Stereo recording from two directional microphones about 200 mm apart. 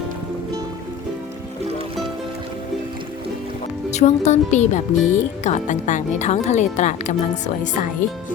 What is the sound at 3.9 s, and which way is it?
Speech, 35° left (ahead or behind).